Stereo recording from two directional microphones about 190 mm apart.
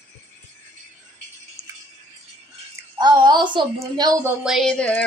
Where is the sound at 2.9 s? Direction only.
20° right (ahead or behind).